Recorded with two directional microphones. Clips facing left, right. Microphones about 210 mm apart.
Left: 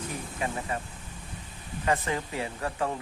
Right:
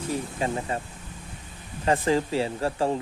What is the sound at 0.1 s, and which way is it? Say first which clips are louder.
Speech: right 8 dB; 30° right (ahead or behind).